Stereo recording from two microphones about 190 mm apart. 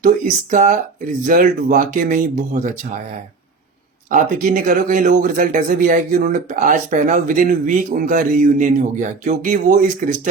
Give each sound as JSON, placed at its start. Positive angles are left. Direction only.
{"t": 0.0, "sound": "speech", "side_deg": -45}
{"t": 4.1, "sound": "speech", "side_deg": -45}